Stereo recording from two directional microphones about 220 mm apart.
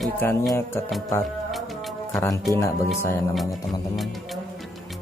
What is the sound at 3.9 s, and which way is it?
Music, centre (ahead or behind).